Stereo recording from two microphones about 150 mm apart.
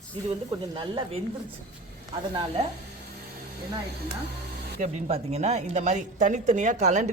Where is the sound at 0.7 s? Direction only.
35° right (ahead or behind).